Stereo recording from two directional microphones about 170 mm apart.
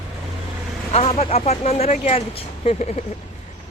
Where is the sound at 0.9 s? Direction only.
35° left (ahead or behind).